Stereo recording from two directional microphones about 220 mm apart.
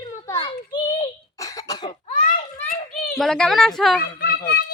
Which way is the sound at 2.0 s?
30° left (ahead or behind).